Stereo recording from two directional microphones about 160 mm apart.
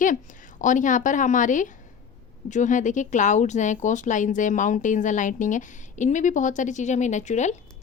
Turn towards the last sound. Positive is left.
turn(degrees=45)  # may be behind; listen again after turning